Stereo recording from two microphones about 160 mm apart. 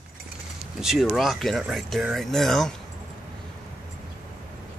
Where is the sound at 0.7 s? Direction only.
Centre (ahead or behind).